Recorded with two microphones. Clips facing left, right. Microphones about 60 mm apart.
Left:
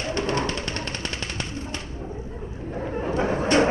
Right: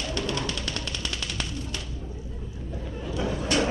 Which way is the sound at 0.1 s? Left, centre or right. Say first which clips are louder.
Left 6 dB; left.